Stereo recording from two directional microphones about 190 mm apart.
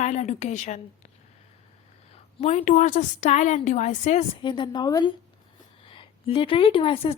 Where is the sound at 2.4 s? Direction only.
35° left (ahead or behind).